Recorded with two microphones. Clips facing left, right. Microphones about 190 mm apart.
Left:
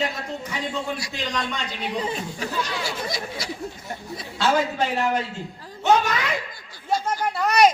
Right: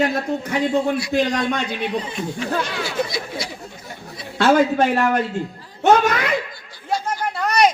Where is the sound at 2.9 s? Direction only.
45° left (ahead or behind).